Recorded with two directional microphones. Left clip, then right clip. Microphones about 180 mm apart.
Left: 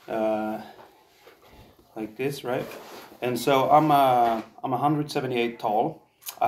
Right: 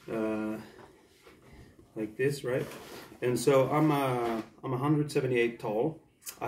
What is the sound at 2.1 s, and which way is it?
Speech, 20° right (ahead or behind).